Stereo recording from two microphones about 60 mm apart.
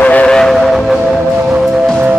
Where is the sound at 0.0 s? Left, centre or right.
Left.